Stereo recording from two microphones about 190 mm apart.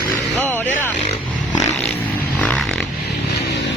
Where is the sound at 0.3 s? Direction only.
10° left (ahead or behind).